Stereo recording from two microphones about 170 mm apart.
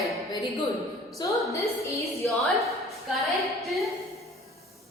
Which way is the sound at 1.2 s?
25° left (ahead or behind).